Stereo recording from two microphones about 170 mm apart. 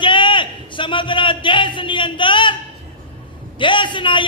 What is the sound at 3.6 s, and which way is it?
Speech, 30° left (ahead or behind).